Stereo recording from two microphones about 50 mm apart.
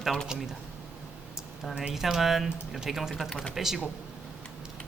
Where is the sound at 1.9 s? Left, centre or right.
Centre.